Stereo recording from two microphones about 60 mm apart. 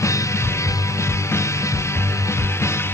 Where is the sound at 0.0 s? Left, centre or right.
Left.